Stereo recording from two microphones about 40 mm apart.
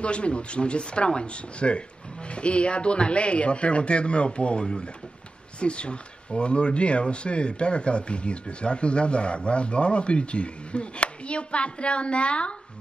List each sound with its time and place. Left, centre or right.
0.0 s speech: left